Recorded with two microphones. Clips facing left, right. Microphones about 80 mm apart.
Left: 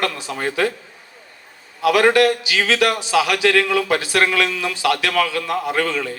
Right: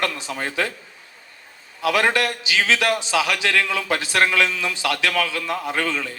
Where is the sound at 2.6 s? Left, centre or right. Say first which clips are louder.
Left 1 dB; left.